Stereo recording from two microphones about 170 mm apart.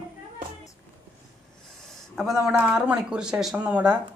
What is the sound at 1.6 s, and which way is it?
A man's voice, centre (ahead or behind).